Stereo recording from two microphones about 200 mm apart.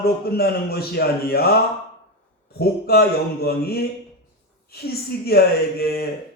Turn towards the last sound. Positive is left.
turn(degrees=50)  # may be behind; listen again after turning